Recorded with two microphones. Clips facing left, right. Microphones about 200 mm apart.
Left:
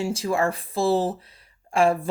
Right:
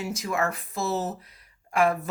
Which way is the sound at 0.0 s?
30° left (ahead or behind).